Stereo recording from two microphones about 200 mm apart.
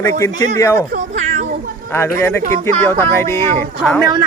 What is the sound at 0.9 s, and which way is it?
Cat, 40° right (ahead or behind).